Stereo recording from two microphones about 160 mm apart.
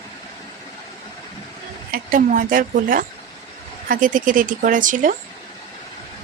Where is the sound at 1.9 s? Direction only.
60° right (ahead or behind).